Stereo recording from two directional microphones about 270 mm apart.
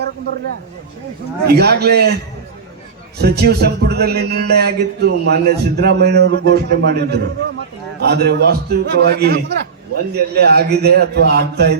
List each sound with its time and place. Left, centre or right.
1.5 s speech: right
3.2 s speech: right